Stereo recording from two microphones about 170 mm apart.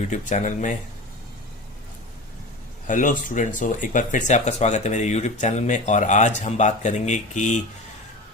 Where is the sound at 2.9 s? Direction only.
50° left (ahead or behind).